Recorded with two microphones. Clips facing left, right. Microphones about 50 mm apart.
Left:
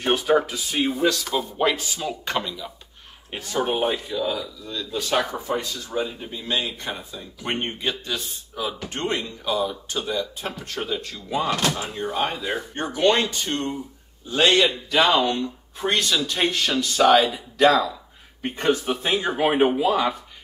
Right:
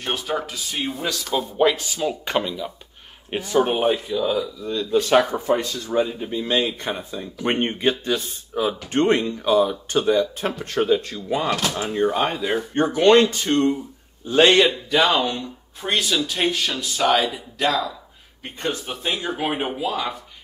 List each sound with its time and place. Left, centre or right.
0.0 s speech: centre
4.6 s speech: right
11.5 s speech: centre
11.9 s speech: right
14.3 s a man's voice: right
14.7 s speech: centre
18.4 s speech: left
19.1 s speech: centre